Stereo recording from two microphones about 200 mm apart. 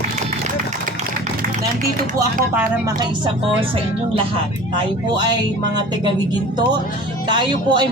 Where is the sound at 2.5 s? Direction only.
20° right (ahead or behind).